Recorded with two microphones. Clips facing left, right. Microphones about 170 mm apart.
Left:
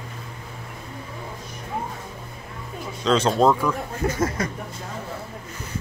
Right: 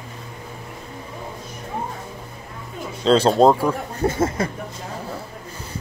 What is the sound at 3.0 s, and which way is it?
Speech, 30° right (ahead or behind).